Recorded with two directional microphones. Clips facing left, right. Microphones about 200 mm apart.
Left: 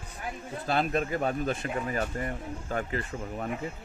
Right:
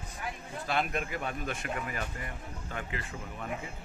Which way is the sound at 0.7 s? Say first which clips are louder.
Left 5 dB; 35° left (ahead or behind).